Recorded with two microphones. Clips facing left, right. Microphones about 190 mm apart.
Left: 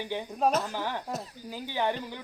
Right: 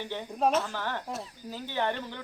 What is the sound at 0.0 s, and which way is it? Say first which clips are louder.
Speech: left 1 dB; 15° left (ahead or behind).